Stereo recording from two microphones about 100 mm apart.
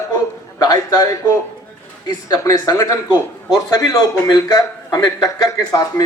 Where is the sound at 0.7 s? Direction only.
40° left (ahead or behind).